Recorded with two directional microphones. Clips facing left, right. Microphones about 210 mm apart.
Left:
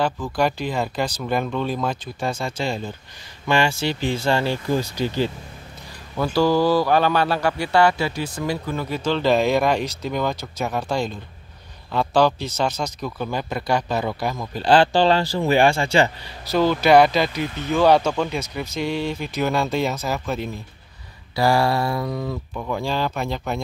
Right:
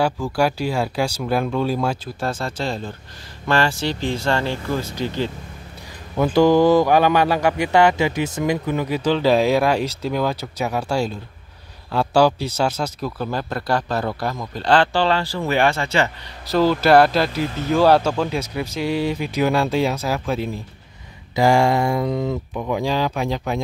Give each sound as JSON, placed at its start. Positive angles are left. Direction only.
{"t": 0.0, "sound": "speech", "side_deg": -10}
{"t": 6.1, "sound": "speech", "side_deg": -20}
{"t": 16.4, "sound": "speech", "side_deg": 0}